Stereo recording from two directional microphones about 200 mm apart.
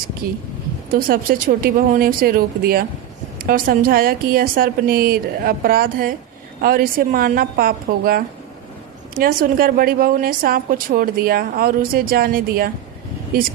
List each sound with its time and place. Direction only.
0.2 s a woman's voice: 50° right (ahead or behind)